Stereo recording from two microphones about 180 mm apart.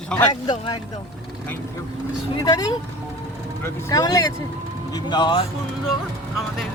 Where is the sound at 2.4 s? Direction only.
20° left (ahead or behind).